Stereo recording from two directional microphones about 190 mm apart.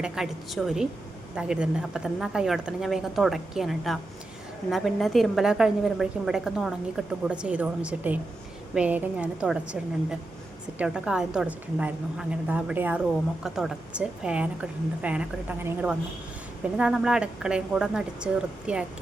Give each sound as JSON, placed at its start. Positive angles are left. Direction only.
{"t": 0.0, "sound": "a woman's voice", "side_deg": 0}
{"t": 10.8, "sound": "a woman's voice", "side_deg": -5}